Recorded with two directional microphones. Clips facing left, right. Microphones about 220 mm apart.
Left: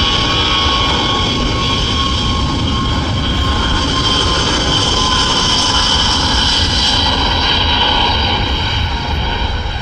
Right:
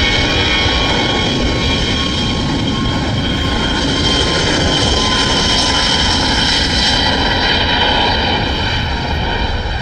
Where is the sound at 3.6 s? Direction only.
15° right (ahead or behind).